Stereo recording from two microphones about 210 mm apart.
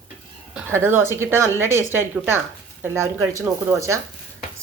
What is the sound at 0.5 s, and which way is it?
Speech, 10° right (ahead or behind).